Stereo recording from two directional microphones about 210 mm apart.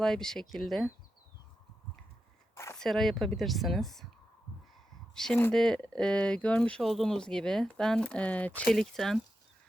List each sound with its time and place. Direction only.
0.0 s speech: centre (ahead or behind)
2.7 s speech: centre (ahead or behind)
5.1 s speech: 5° left (ahead or behind)